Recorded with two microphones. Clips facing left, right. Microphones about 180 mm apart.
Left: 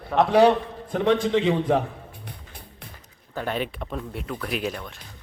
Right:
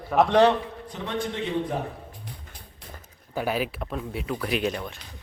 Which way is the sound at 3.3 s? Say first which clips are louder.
Right 1 dB; 5° right (ahead or behind).